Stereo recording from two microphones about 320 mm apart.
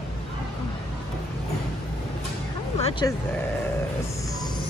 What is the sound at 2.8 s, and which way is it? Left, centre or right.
Speech, centre.